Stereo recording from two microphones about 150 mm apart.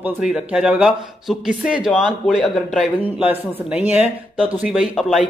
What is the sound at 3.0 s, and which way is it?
Speech, 10° right (ahead or behind).